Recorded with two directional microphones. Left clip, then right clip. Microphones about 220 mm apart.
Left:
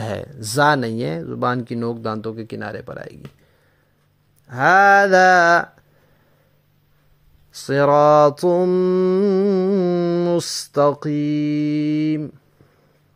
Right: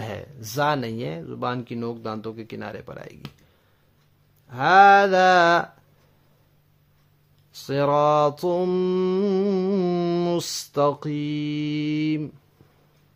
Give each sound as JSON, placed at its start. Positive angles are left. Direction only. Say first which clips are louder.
{"t": 0.0, "sound": "mantra", "louder": "left 7 dB", "side_deg": 30}
{"t": 4.6, "sound": "a sound", "louder": "left 1 dB", "side_deg": 10}
{"t": 5.1, "sound": "mantra", "louder": "left 4 dB", "side_deg": 25}
{"t": 7.6, "sound": "mantra", "louder": "left 6 dB", "side_deg": 25}